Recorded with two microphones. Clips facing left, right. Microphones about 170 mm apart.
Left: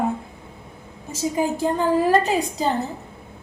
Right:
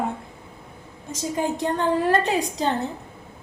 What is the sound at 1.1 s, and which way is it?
A woman's voice, 5° left (ahead or behind).